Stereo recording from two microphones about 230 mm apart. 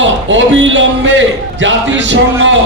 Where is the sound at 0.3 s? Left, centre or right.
Right.